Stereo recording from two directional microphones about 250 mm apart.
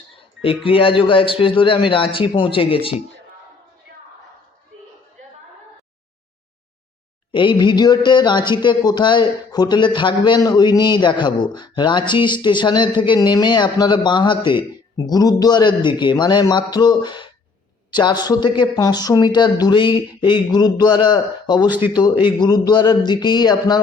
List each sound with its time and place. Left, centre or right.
0.6 s a man's voice: left
7.3 s speech: centre